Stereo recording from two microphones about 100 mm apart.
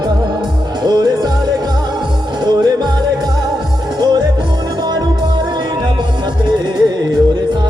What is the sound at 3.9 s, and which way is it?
Music, 40° right (ahead or behind).